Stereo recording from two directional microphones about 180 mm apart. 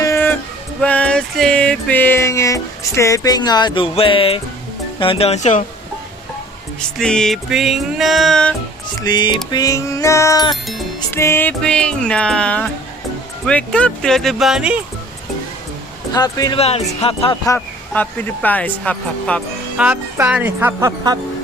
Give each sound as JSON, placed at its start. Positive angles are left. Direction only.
{"t": 0.0, "sound": "music", "side_deg": 15}
{"t": 4.9, "sound": "speech", "side_deg": 30}
{"t": 7.0, "sound": "music", "side_deg": 5}
{"t": 9.0, "sound": "music", "side_deg": 25}
{"t": 16.1, "sound": "music", "side_deg": 20}
{"t": 16.6, "sound": "speech", "side_deg": 35}
{"t": 17.4, "sound": "music", "side_deg": 15}
{"t": 19.7, "sound": "speech", "side_deg": -10}